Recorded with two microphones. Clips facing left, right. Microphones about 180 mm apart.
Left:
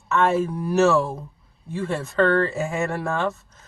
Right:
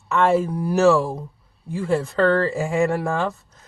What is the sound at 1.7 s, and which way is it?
Speech, 10° right (ahead or behind).